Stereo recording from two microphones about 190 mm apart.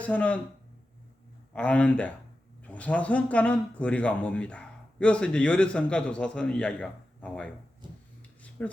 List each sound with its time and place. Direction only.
0.0 s speech: 5° left (ahead or behind)
1.5 s speech: 5° left (ahead or behind)
8.4 s dishes: 10° left (ahead or behind)